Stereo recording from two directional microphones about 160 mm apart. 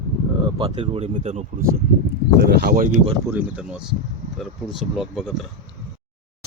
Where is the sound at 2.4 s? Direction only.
85° right; by 2.9 s 70° right (ahead or behind).